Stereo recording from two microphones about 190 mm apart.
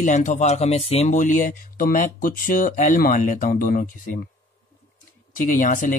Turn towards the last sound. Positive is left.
turn(degrees=45)  # may be behind; listen again after turning